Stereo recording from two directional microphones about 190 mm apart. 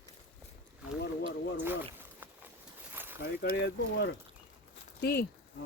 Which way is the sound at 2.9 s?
10° right (ahead or behind).